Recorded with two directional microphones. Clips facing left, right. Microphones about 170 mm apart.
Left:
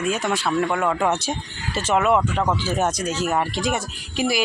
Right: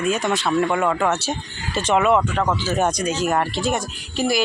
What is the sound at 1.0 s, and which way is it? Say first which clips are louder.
Speech: right 1 dB; 15° left (ahead or behind).